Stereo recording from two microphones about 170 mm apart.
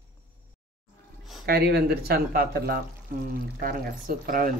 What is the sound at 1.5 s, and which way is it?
Speech, 65° right (ahead or behind).